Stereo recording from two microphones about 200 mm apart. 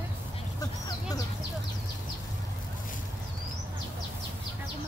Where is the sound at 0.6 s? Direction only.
20° left (ahead or behind).